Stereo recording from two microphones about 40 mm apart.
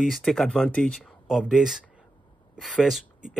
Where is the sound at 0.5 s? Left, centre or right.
Left.